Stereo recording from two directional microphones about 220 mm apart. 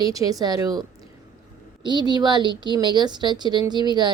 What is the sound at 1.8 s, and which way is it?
A woman's voice, 20° right (ahead or behind).